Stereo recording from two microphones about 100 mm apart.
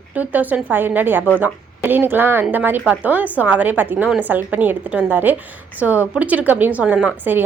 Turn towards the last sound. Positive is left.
turn(degrees=-10)  # may be behind; listen again after turning